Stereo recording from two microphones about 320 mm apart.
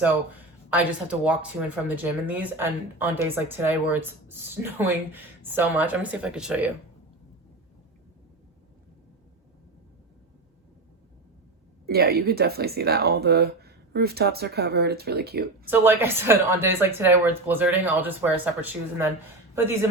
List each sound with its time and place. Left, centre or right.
0.7 s speech: centre
11.9 s speech: right
15.6 s speech: centre